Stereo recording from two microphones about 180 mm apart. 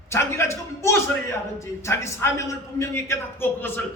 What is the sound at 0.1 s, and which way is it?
A man's voice, 15° left (ahead or behind).